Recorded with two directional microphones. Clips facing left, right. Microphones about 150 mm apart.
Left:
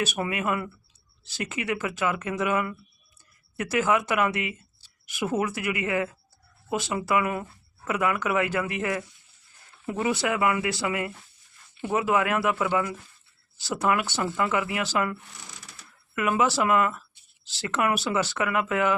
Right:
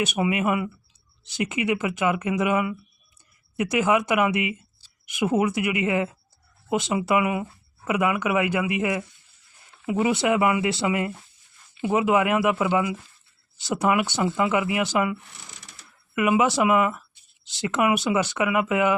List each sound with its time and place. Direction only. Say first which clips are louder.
0.0 s speech: right 4 dB; 20° right (ahead or behind)